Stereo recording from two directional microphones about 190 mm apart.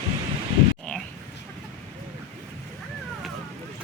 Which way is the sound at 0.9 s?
5° left (ahead or behind).